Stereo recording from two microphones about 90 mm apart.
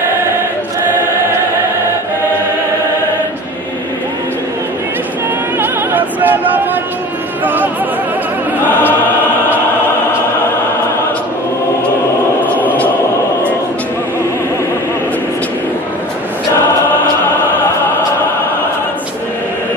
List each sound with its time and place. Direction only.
5.6 s opera: 20° right (ahead or behind)
7.4 s music: 20° right (ahead or behind)
12.4 s a sound: 20° left (ahead or behind)